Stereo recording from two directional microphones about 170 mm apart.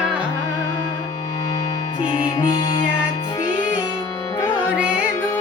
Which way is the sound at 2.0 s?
25° left (ahead or behind).